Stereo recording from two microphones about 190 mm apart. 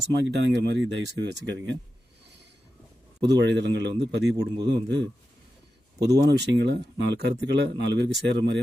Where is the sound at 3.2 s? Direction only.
65° right (ahead or behind).